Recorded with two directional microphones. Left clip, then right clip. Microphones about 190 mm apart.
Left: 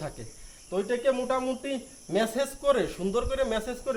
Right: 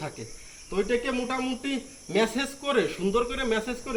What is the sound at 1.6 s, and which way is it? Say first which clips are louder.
Speech: right 1 dB; 30° left (ahead or behind).